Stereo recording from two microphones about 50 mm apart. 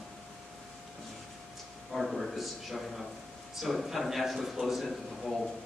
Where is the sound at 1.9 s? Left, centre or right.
Centre.